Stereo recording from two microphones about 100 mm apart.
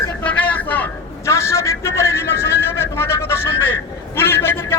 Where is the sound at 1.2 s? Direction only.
30° left (ahead or behind).